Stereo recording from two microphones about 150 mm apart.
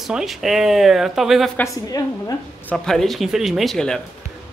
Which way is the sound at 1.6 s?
25° left (ahead or behind).